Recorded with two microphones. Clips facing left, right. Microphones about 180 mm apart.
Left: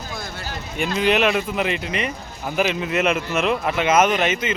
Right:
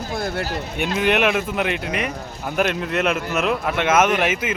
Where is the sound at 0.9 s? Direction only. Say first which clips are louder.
Even; 5° right (ahead or behind).